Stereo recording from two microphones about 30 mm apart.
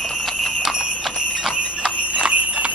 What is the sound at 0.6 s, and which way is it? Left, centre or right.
Jingle bell, centre.